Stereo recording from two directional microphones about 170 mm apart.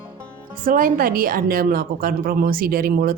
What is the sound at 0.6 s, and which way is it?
A woman's voice, 55° right (ahead or behind).